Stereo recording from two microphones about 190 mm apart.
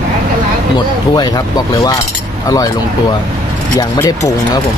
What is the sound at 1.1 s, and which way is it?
Speech, 20° left (ahead or behind).